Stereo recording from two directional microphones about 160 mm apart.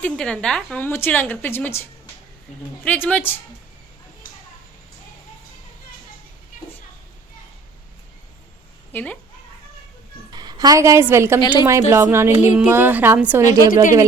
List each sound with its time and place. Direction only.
0.0 s a woman's voice: 5° left (ahead or behind)
8.9 s a woman's voice: 10° left (ahead or behind)
10.3 s a woman's voice: 25° right (ahead or behind)